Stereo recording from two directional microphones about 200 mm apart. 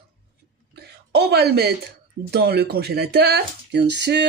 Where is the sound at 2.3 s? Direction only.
55° right (ahead or behind).